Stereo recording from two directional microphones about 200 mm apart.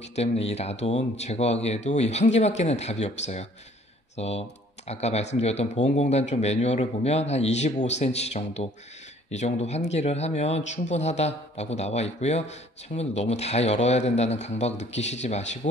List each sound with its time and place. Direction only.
0.1 s speech: 30° left (ahead or behind)